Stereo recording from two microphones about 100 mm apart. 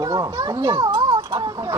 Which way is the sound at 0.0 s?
40° right (ahead or behind).